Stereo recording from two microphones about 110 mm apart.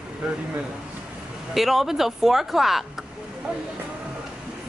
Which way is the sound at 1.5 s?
Centre (ahead or behind).